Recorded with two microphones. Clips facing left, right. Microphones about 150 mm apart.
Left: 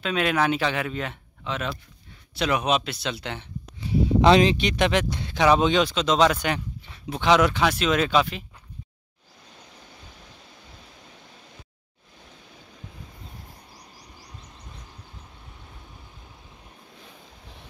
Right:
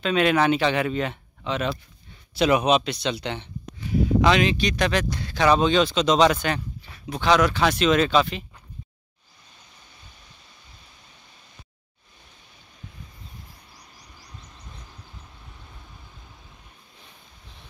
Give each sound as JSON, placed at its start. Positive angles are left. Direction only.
{"t": 0.0, "sound": "speech", "side_deg": 5}
{"t": 4.2, "sound": "speech", "side_deg": 30}
{"t": 7.1, "sound": "speech", "side_deg": 20}
{"t": 7.6, "sound": "speech", "side_deg": 5}